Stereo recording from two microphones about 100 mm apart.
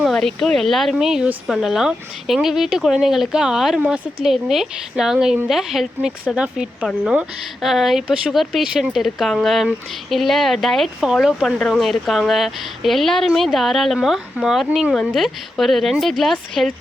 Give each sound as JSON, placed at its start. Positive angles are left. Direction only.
{"t": 0.0, "sound": "a woman's voice", "side_deg": 5}